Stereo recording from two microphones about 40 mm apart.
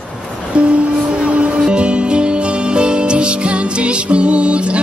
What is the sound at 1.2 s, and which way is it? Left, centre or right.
Music, right.